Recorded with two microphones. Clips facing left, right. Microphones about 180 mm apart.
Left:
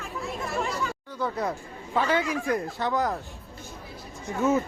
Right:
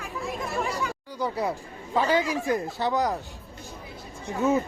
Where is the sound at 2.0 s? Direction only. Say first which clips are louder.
Right 2 dB; 30° right (ahead or behind).